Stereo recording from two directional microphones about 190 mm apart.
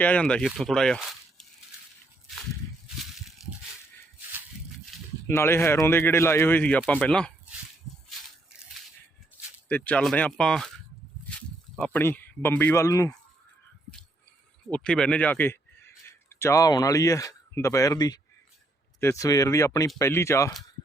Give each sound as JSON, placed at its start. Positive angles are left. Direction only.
{"t": 0.0, "sound": "speech", "side_deg": 5}
{"t": 2.8, "sound": "crushing", "side_deg": 0}
{"t": 5.3, "sound": "speech", "side_deg": 15}
{"t": 9.6, "sound": "speech", "side_deg": 10}
{"t": 11.8, "sound": "speech", "side_deg": 10}
{"t": 14.8, "sound": "a man's voice", "side_deg": 5}